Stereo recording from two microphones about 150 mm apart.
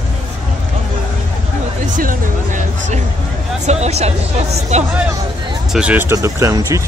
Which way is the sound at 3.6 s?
45° right (ahead or behind).